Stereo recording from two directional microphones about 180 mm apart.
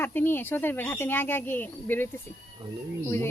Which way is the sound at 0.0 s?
10° left (ahead or behind).